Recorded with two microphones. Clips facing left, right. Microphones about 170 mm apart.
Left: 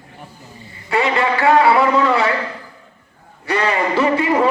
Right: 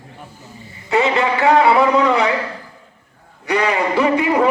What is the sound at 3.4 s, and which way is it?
Speech, 15° right (ahead or behind).